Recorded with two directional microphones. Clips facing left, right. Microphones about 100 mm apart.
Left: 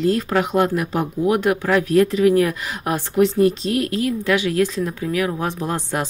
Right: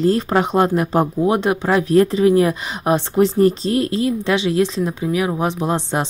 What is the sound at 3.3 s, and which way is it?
Speech, 35° right (ahead or behind).